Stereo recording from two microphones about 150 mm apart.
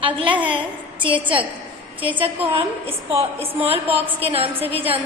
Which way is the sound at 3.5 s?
40° right (ahead or behind).